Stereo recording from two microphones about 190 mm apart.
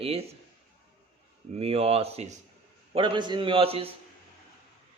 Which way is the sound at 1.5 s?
30° right (ahead or behind).